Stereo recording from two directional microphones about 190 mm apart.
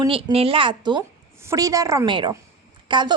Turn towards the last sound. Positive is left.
turn(degrees=-25)  # may be behind; listen again after turning